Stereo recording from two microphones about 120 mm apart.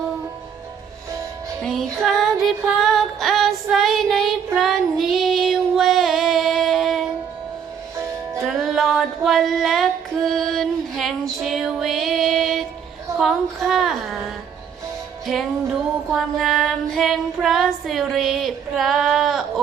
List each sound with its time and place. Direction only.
1.6 s music: 5° left (ahead or behind)
4.5 s child singing: centre (ahead or behind)
7.9 s music: 25° right (ahead or behind)
8.4 s female singing: centre (ahead or behind)
13.1 s a sound: centre (ahead or behind)
16.1 s child singing: centre (ahead or behind)